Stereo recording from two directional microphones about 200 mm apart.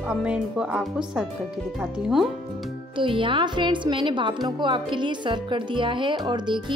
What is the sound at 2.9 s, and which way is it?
Speech, 25° right (ahead or behind).